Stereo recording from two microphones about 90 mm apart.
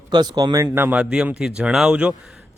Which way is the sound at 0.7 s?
25° right (ahead or behind).